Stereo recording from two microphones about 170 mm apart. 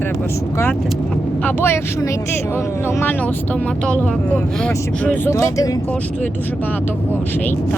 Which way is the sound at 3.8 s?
10° left (ahead or behind).